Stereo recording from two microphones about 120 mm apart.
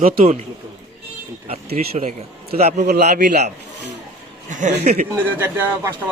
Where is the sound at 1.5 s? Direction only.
70° right (ahead or behind).